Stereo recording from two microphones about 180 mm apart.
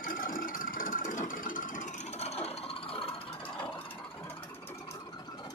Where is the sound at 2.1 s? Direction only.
35° left (ahead or behind).